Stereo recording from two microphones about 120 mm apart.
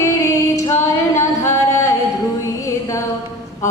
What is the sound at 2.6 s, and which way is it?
Music, 25° left (ahead or behind).